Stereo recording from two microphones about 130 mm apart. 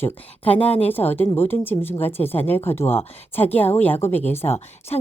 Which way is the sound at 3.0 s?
50° left (ahead or behind).